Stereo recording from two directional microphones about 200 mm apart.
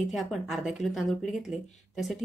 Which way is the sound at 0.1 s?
Centre (ahead or behind).